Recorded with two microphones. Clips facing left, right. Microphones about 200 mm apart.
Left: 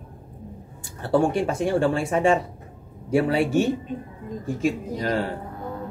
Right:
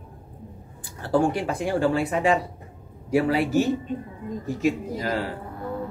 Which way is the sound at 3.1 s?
30° left (ahead or behind).